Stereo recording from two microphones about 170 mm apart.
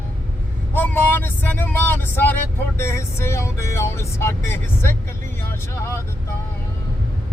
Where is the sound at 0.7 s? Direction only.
10° left (ahead or behind).